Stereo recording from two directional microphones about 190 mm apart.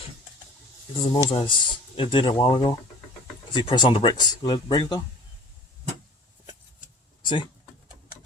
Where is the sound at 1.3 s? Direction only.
25° left (ahead or behind).